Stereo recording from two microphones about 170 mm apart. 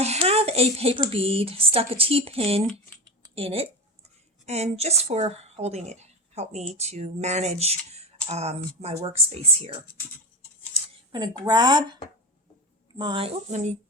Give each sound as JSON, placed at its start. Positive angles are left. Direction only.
{"t": 0.0, "sound": "a woman's voice", "side_deg": -40}
{"t": 11.1, "sound": "speech", "side_deg": -25}
{"t": 13.0, "sound": "a woman's voice", "side_deg": -30}